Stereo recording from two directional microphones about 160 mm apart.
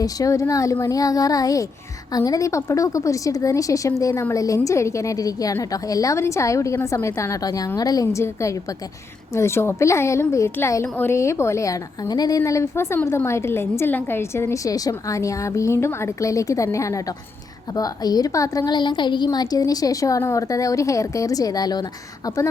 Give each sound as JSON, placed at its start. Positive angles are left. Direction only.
{"t": 0.0, "sound": "a woman's voice", "side_deg": 20}